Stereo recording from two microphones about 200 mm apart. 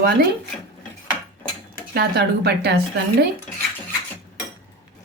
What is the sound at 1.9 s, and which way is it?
Speech, 50° right (ahead or behind).